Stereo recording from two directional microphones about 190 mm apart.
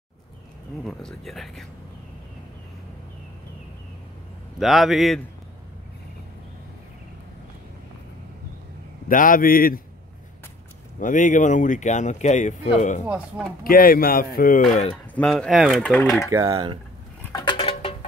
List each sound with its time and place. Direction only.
0.8 s speech: centre (ahead or behind)
4.6 s speech: centre (ahead or behind)
9.1 s speech: 45° left (ahead or behind)
11.0 s speech: 45° left (ahead or behind)
13.0 s speech: 5° right (ahead or behind)
13.7 s speech: 50° left (ahead or behind)
14.7 s speech: 35° left (ahead or behind)
15.1 s speech: 5° left (ahead or behind)
16.3 s speech: 20° right (ahead or behind)
17.3 s patter: 25° left (ahead or behind)